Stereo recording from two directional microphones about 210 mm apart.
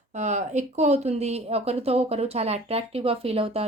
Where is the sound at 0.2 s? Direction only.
35° right (ahead or behind).